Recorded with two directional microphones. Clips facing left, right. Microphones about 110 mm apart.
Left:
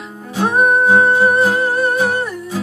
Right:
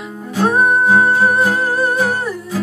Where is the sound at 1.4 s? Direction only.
Centre (ahead or behind).